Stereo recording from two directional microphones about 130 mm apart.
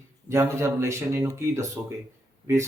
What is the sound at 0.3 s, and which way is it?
Speech, 20° right (ahead or behind).